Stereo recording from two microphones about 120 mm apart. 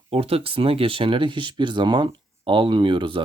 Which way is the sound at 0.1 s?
55° right (ahead or behind).